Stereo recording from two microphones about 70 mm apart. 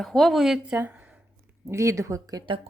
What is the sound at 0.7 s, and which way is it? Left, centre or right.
Speech, right.